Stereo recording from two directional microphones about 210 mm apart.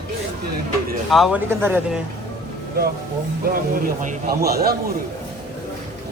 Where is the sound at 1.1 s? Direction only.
Centre (ahead or behind).